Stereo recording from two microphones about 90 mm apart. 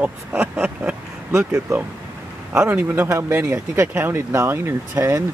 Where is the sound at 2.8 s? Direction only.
25° right (ahead or behind).